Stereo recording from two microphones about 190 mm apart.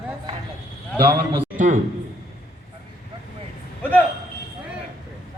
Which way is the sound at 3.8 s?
10° left (ahead or behind).